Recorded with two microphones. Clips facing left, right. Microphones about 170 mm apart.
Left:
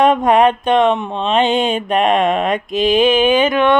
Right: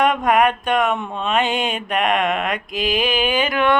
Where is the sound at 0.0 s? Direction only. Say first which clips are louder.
Left 5 dB; 25° left (ahead or behind).